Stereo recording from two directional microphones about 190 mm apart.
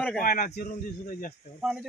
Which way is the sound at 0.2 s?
50° left (ahead or behind).